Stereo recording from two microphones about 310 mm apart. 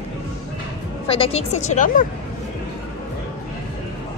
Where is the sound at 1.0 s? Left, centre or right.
Centre.